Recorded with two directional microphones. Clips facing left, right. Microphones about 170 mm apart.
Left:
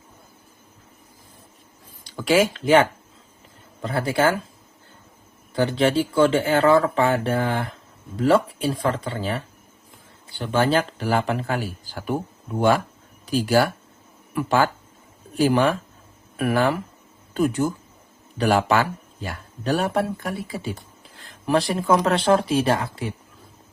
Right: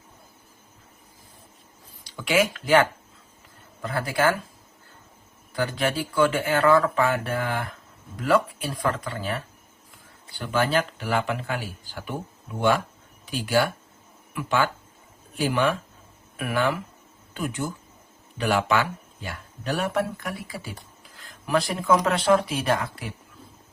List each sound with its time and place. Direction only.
2.0 s speech: 40° left (ahead or behind)
5.5 s speech: 25° left (ahead or behind)
10.3 s speech: 25° left (ahead or behind)